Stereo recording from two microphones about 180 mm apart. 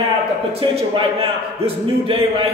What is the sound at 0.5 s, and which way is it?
A man's voice, 30° right (ahead or behind).